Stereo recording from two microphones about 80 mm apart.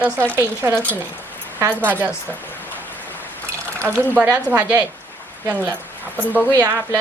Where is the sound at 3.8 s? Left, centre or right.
Right.